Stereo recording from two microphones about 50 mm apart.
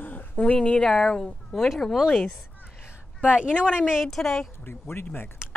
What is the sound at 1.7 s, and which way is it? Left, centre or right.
Speech, centre.